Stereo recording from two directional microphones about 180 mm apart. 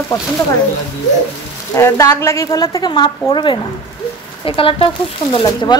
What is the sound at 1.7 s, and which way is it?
A woman's voice, 15° left (ahead or behind).